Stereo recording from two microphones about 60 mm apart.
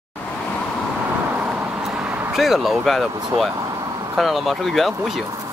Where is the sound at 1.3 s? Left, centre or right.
Right.